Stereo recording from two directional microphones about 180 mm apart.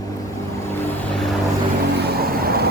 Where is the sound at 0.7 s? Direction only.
5° left (ahead or behind).